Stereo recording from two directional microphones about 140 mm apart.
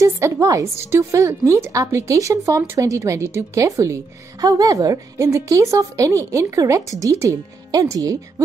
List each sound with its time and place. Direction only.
0.0 s speech: 20° right (ahead or behind)